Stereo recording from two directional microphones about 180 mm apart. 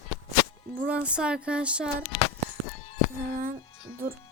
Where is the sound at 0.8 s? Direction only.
5° right (ahead or behind).